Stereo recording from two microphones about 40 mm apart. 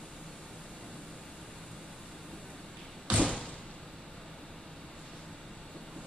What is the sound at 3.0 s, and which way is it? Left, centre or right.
Door, right.